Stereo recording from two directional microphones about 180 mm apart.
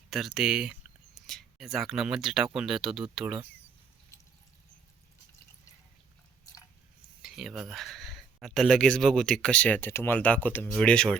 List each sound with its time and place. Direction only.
0.1 s speech: 5° right (ahead or behind)
7.2 s speech: centre (ahead or behind)